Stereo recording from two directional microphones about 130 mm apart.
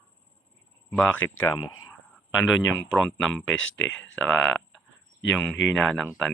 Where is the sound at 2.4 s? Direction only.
15° left (ahead or behind).